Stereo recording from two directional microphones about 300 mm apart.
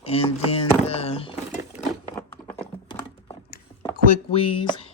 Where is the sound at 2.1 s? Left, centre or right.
Centre.